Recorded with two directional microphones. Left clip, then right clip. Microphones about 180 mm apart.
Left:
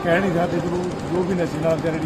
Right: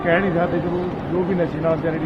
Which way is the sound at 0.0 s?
20° left (ahead or behind).